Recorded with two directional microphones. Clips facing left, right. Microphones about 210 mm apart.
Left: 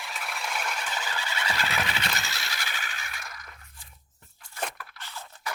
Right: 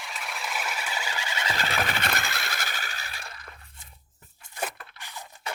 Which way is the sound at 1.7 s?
50° right (ahead or behind).